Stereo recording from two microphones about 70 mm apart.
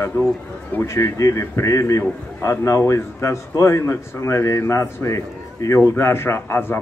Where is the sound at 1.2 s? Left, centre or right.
Left.